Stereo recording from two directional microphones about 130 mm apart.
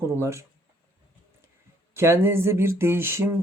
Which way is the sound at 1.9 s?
20° right (ahead or behind).